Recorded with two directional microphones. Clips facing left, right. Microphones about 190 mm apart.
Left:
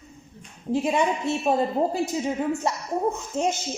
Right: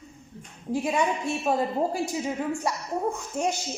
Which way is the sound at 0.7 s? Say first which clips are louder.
Left 3 dB; 25° left (ahead or behind).